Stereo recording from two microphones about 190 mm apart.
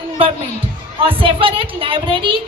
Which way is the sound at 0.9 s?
30° right (ahead or behind).